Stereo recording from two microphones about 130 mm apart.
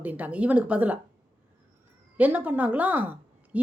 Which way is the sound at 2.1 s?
10° right (ahead or behind).